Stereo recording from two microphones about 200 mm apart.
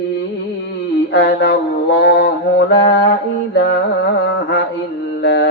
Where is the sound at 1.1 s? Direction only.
60° left (ahead or behind).